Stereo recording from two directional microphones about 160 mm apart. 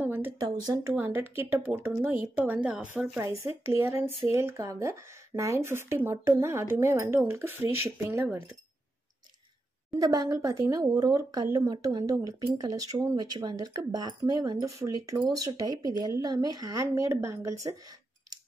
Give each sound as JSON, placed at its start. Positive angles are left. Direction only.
{"t": 0.0, "sound": "a sound", "side_deg": -10}
{"t": 0.4, "sound": "speech", "side_deg": -25}
{"t": 0.9, "sound": "speech", "side_deg": -10}
{"t": 9.8, "sound": "speech", "side_deg": -20}